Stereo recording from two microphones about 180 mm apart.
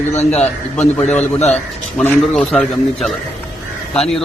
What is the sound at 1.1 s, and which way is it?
Speech, 40° left (ahead or behind).